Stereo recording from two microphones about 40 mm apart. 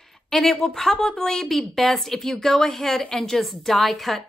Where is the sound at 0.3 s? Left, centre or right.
Centre.